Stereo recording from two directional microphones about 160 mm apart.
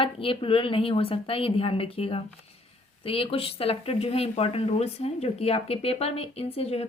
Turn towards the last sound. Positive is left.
turn(degrees=40)  # may be behind; listen again after turning